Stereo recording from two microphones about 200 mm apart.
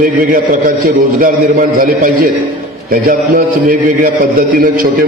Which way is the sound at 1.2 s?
45° right (ahead or behind).